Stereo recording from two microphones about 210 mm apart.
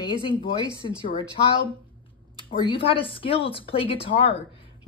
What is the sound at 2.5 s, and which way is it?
Speech, 25° left (ahead or behind).